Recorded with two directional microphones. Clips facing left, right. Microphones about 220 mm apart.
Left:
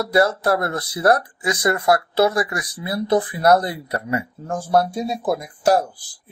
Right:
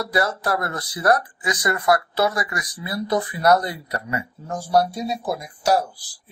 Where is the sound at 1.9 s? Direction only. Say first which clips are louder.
Left 2 dB; 30° left (ahead or behind).